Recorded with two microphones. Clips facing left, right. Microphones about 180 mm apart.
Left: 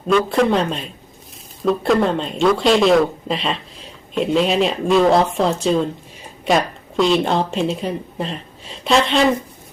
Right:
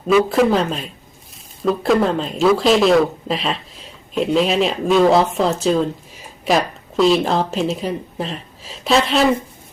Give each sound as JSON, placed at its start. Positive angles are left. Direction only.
{"t": 0.1, "sound": "speech", "side_deg": -5}